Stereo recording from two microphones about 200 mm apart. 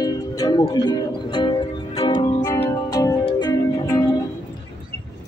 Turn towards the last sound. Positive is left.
turn(degrees=20)  # may be behind; listen again after turning